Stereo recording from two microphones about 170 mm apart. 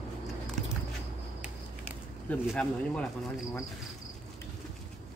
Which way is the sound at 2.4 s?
5° left (ahead or behind).